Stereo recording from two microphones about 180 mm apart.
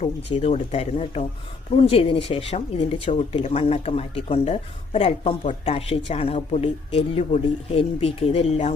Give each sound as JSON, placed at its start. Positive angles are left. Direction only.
{"t": 0.3, "sound": "speech", "side_deg": 35}